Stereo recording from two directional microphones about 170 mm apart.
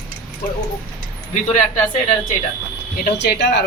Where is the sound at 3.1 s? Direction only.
80° left.